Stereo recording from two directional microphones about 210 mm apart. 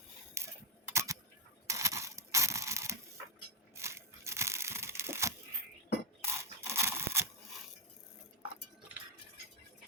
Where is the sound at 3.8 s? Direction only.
15° right (ahead or behind).